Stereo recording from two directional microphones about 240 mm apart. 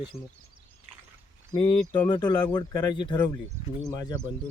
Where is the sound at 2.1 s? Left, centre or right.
Centre.